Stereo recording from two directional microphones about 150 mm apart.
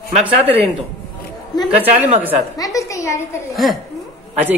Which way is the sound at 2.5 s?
20° left (ahead or behind).